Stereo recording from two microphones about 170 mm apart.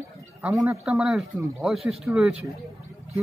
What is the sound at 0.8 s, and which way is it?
Speech, 5° right (ahead or behind).